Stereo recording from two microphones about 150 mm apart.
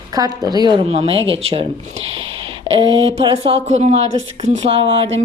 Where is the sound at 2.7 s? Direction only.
35° right (ahead or behind).